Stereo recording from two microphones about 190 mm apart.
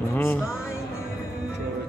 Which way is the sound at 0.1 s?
10° left (ahead or behind).